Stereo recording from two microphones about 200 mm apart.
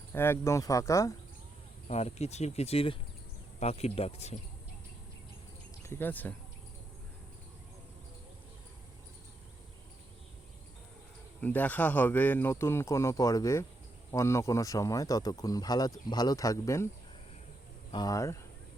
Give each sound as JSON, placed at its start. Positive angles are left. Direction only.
{"t": 0.1, "sound": "speech", "side_deg": 10}
{"t": 1.9, "sound": "speech", "side_deg": 30}
{"t": 5.8, "sound": "speech", "side_deg": 10}
{"t": 11.3, "sound": "speech", "side_deg": 10}
{"t": 17.9, "sound": "speech", "side_deg": 20}